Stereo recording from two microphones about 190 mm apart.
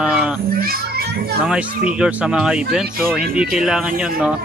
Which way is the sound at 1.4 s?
5° right (ahead or behind).